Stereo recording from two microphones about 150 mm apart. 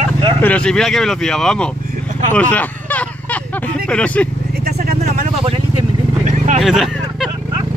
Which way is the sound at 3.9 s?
10° left (ahead or behind).